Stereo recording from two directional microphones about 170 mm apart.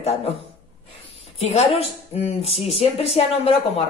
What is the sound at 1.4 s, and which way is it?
Speech, 40° left (ahead or behind).